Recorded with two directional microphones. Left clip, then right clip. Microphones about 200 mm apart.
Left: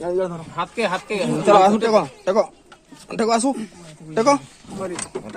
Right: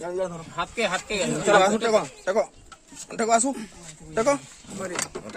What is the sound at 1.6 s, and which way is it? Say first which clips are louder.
A man's voice: left 5 dB; 35° left (ahead or behind).